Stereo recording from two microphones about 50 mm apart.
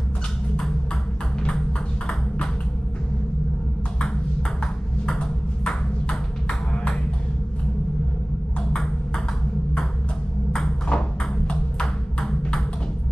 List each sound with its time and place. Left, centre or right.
2.0 s ping: centre
5.6 s ping: centre
6.7 s music: centre
10.9 s ping: centre